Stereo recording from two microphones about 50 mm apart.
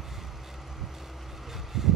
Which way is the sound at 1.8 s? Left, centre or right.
Centre.